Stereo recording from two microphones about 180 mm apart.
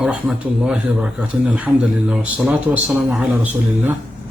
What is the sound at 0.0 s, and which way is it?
A man's voice, 5° right (ahead or behind).